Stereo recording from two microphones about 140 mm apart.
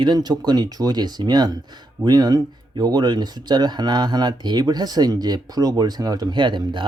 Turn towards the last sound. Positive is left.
turn(degrees=-35)  # may be behind; listen again after turning